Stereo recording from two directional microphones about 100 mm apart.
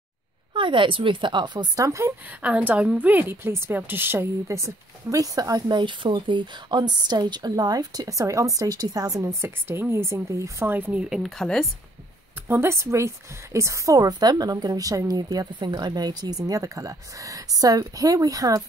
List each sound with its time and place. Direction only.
0.5 s a woman's voice: 55° right (ahead or behind)
1.9 s speech: 30° right (ahead or behind)
2.4 s a woman's voice: 15° right (ahead or behind)
11.1 s speech: centre (ahead or behind)
12.4 s a woman's voice: 25° right (ahead or behind)